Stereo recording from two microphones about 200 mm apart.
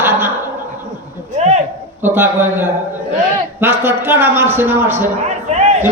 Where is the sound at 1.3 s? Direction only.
35° right (ahead or behind).